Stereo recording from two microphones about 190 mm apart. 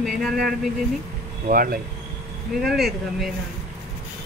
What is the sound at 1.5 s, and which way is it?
Speech, 50° right (ahead or behind).